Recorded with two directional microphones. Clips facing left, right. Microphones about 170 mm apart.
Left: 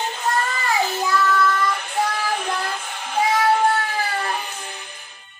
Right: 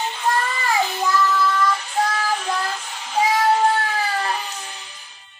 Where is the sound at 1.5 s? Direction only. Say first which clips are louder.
Right 1 dB; 55° left (ahead or behind).